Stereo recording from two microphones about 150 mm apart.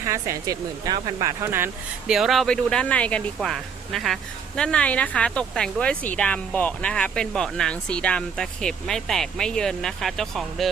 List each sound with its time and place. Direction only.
0.0 s speech: 20° right (ahead or behind)
2.1 s speech: centre (ahead or behind)